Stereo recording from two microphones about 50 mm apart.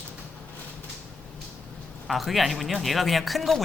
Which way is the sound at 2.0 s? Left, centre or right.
Centre.